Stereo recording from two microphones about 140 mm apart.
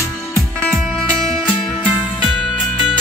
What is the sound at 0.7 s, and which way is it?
Music, 5° right (ahead or behind).